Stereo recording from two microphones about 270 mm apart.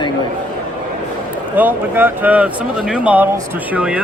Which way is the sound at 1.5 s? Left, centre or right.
Centre.